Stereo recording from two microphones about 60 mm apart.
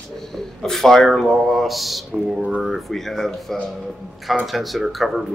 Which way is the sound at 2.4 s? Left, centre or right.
Centre.